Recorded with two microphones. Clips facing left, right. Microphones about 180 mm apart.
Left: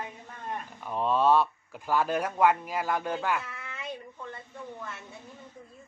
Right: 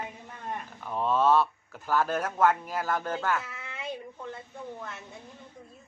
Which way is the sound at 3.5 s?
25° right (ahead or behind).